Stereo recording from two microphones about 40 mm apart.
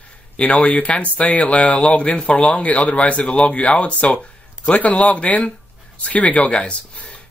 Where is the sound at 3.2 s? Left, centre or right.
Left.